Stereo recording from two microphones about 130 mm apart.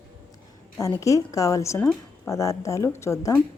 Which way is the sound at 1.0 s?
25° left (ahead or behind).